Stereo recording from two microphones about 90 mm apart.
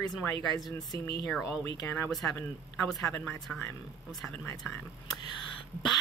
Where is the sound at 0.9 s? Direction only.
50° left (ahead or behind).